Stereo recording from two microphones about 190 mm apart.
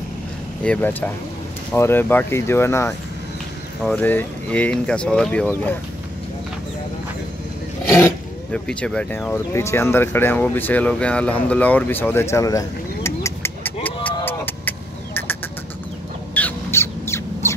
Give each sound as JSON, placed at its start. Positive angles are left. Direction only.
{"t": 0.7, "sound": "speech", "side_deg": 10}
{"t": 7.9, "sound": "speech", "side_deg": 10}
{"t": 14.0, "sound": "a sound", "side_deg": 10}
{"t": 16.3, "sound": "squawk", "side_deg": 10}